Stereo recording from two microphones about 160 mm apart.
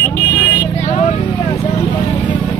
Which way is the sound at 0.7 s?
40° left (ahead or behind).